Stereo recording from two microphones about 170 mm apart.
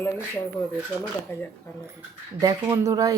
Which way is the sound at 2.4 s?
20° right (ahead or behind).